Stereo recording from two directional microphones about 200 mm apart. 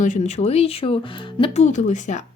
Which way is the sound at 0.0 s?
35° left (ahead or behind).